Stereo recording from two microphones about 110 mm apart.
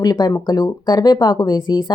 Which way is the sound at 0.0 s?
35° left (ahead or behind).